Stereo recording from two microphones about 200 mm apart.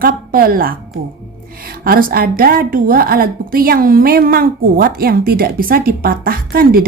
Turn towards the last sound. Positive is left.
turn(degrees=-45)  # may be behind; listen again after turning